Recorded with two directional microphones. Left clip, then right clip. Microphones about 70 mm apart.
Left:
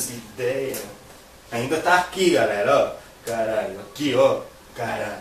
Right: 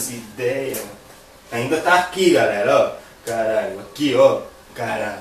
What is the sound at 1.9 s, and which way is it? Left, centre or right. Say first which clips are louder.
Speech: right 3 dB; left.